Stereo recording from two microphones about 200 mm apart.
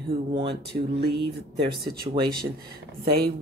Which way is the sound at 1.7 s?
50° right (ahead or behind).